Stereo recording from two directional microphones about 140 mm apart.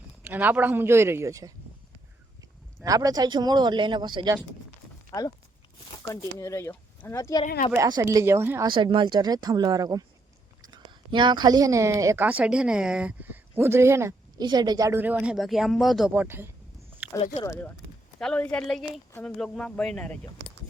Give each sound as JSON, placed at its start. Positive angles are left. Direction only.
{"t": 0.2, "sound": "speech", "side_deg": -15}
{"t": 2.8, "sound": "speech", "side_deg": -25}
{"t": 6.0, "sound": "speech", "side_deg": 25}
{"t": 7.4, "sound": "speech", "side_deg": 65}
{"t": 7.8, "sound": "speech", "side_deg": -30}
{"t": 8.0, "sound": "speech", "side_deg": -20}
{"t": 8.6, "sound": "a woman's voice", "side_deg": -35}
{"t": 14.4, "sound": "speech", "side_deg": -30}
{"t": 17.0, "sound": "a sound", "side_deg": -15}
{"t": 17.4, "sound": "speech", "side_deg": 25}
{"t": 18.2, "sound": "a woman's voice", "side_deg": 5}